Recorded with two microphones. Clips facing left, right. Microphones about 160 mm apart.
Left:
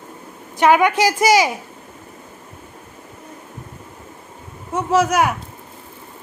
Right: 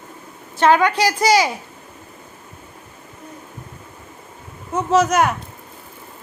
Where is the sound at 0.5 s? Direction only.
15° left (ahead or behind).